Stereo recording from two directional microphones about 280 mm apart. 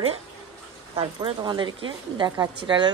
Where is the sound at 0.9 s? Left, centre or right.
Centre.